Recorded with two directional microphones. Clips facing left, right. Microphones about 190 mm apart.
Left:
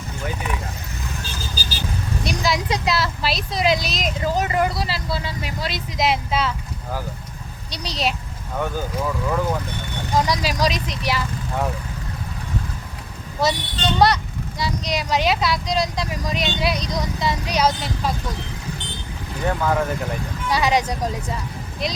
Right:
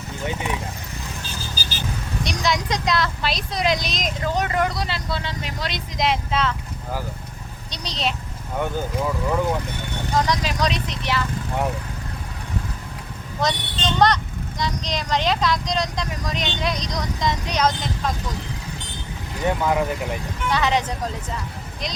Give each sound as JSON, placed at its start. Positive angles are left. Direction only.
{"t": 0.3, "sound": "speech", "side_deg": -25}
{"t": 2.2, "sound": "speech", "side_deg": 5}
{"t": 7.7, "sound": "speech", "side_deg": 10}
{"t": 8.5, "sound": "speech", "side_deg": -10}
{"t": 10.2, "sound": "speech", "side_deg": 10}
{"t": 13.4, "sound": "speech", "side_deg": 10}
{"t": 19.5, "sound": "speech", "side_deg": -15}
{"t": 20.5, "sound": "speech", "side_deg": 10}